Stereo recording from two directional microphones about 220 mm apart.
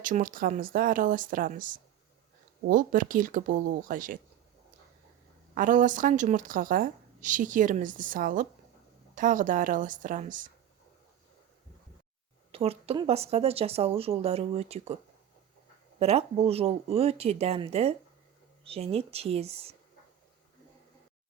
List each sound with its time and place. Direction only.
0.0 s speech: 40° right (ahead or behind)
5.5 s speech: 35° right (ahead or behind)
12.5 s speech: 25° right (ahead or behind)
16.0 s speech: 30° right (ahead or behind)